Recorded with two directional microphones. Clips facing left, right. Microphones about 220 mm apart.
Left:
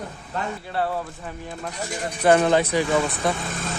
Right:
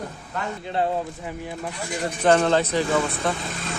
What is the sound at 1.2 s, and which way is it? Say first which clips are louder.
Speech: right 2 dB; 10° right (ahead or behind).